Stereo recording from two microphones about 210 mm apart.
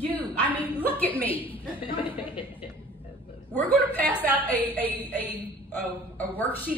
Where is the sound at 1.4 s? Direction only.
25° left (ahead or behind).